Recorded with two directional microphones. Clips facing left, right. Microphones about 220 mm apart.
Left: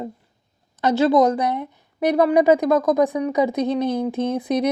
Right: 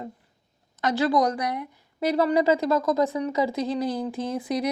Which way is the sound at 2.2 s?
15° left (ahead or behind).